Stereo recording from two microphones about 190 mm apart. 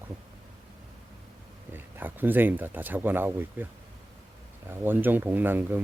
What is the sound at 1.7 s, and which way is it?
Speech, 10° right (ahead or behind).